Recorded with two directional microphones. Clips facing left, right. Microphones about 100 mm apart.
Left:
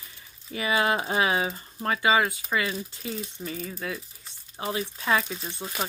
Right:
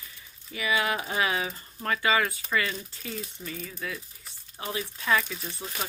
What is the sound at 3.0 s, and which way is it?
Speech, 35° left (ahead or behind).